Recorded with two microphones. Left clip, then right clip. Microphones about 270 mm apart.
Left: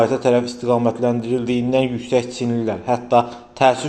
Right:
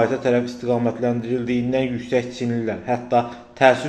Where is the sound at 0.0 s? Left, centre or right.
Centre.